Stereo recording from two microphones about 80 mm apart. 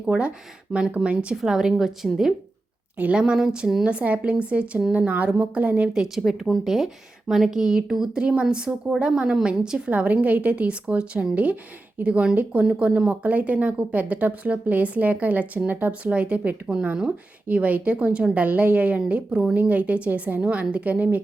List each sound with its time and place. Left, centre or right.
0.0 s a woman's voice: centre
5.9 s a woman's voice: centre